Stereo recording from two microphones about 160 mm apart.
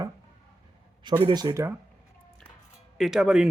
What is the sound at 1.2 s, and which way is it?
Speech, 25° right (ahead or behind).